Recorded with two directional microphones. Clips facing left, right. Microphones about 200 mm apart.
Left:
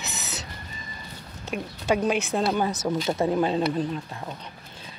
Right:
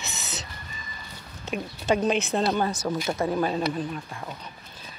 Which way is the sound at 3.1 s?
20° left (ahead or behind).